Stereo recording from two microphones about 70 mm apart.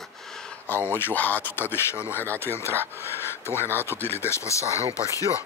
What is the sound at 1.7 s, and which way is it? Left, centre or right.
Speech, left.